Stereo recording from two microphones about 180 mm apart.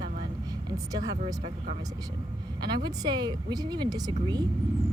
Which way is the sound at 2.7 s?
25° right (ahead or behind).